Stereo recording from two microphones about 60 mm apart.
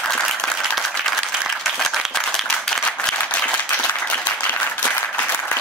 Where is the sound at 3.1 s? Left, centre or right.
Left.